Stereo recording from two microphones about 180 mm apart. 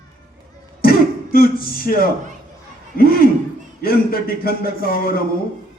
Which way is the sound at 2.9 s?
55° left (ahead or behind).